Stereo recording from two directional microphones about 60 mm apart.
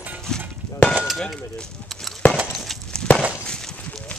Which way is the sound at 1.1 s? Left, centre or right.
Centre.